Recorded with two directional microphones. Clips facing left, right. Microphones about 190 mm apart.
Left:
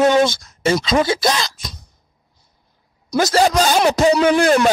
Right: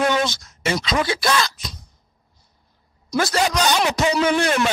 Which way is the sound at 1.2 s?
40° left (ahead or behind).